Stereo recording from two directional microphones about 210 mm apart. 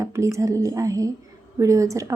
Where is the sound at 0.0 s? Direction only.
15° right (ahead or behind).